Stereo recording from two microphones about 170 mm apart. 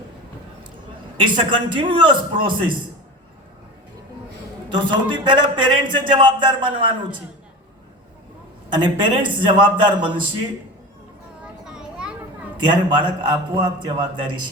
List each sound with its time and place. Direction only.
1.2 s a man's voice: 30° right (ahead or behind)
4.7 s a man's voice: 30° right (ahead or behind)
8.7 s a man's voice: 25° right (ahead or behind)
11.4 s a sound: 5° right (ahead or behind)
12.5 s a man's voice: 25° right (ahead or behind)